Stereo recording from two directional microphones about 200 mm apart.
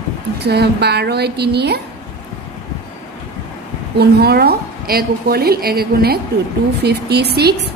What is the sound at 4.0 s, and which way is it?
A woman's voice, 50° right (ahead or behind).